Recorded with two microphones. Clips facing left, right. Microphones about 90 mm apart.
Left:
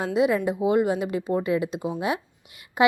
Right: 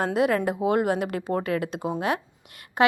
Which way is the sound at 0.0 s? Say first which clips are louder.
Left 1 dB; 50° right (ahead or behind).